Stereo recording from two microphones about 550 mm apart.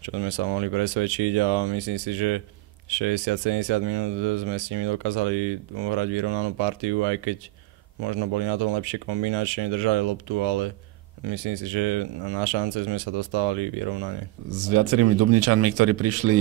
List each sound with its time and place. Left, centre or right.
0.0 s speech: right
14.8 s speech: right